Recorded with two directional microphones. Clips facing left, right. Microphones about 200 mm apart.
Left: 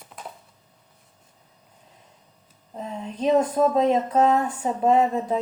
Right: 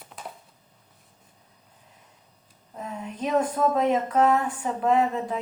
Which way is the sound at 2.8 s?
25° left (ahead or behind).